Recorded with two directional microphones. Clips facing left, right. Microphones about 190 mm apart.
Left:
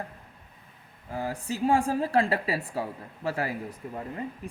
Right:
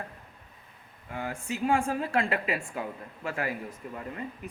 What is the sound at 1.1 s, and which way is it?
A woman's voice, 35° left (ahead or behind).